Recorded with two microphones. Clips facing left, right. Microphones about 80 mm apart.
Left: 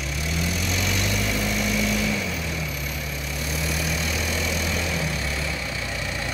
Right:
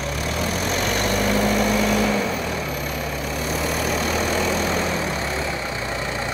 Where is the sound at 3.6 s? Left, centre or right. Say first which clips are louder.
Right 5 dB; right.